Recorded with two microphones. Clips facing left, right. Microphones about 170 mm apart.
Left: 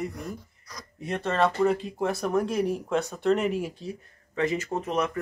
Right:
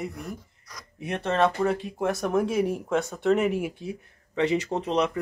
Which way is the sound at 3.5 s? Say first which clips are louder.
Right 1 dB; 15° right (ahead or behind).